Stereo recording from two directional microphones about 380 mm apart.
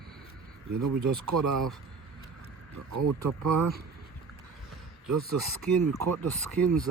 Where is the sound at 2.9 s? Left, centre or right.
Right.